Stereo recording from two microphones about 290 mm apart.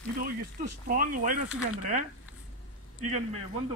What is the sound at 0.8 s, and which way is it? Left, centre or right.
Speech, right.